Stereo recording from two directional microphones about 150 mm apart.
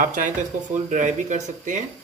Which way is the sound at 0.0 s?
60° right (ahead or behind).